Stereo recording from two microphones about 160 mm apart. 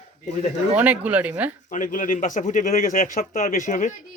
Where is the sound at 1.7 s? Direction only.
55° left (ahead or behind).